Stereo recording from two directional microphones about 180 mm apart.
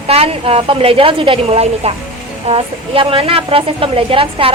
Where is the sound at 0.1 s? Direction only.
35° right (ahead or behind).